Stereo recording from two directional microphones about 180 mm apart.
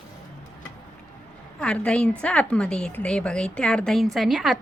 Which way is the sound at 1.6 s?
5° left (ahead or behind).